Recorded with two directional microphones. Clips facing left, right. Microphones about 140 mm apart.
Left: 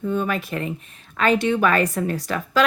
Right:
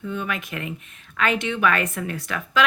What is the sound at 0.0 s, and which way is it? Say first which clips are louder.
A woman's voice: left 5 dB; 40° left (ahead or behind).